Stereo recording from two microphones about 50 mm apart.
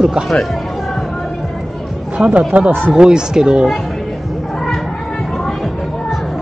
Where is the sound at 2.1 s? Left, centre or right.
Right.